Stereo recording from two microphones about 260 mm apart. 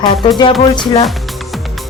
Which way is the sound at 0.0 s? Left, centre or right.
Centre.